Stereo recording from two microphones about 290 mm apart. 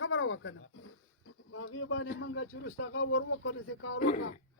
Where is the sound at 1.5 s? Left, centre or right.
Left.